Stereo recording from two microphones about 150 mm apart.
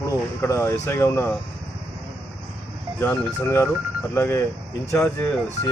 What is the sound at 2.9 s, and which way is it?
Speech, 15° left (ahead or behind).